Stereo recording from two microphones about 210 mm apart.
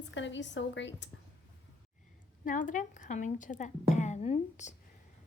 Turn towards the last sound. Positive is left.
turn(degrees=30)  # may be behind; listen again after turning